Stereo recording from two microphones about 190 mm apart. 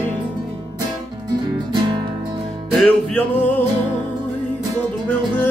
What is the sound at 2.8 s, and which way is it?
Music, 5° left (ahead or behind).